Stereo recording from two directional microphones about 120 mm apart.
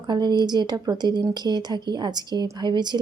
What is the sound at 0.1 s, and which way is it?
Speech, 35° right (ahead or behind).